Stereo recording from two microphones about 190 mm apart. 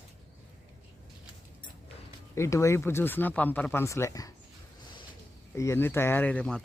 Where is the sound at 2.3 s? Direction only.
15° left (ahead or behind).